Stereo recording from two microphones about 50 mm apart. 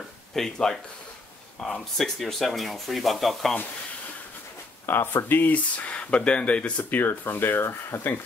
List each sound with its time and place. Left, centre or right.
0.3 s speech: centre
2.0 s speech: centre
4.8 s speech: left
5.5 s speech: left
6.8 s speech: left